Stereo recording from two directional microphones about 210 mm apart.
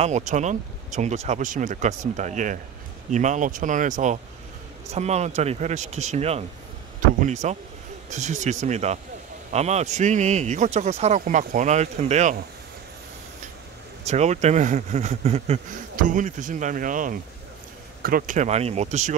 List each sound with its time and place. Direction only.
0.0 s speech: 35° right (ahead or behind)
7.4 s speech: 35° right (ahead or behind)
14.0 s speech: 30° right (ahead or behind)